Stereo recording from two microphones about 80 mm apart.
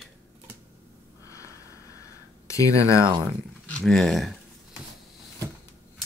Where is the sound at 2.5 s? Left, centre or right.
Left.